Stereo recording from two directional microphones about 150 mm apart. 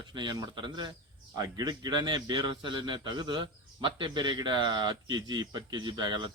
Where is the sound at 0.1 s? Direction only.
30° right (ahead or behind).